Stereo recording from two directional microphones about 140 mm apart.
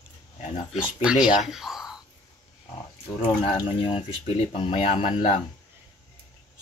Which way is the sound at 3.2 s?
40° left (ahead or behind).